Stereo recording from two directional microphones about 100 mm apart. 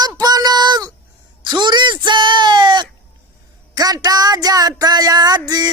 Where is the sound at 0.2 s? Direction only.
40° right (ahead or behind).